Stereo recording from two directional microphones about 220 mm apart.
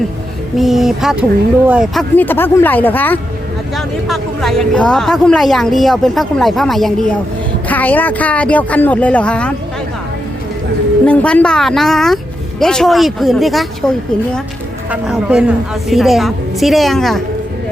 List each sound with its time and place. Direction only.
0.5 s speech: centre (ahead or behind)
11.0 s speech: 5° left (ahead or behind)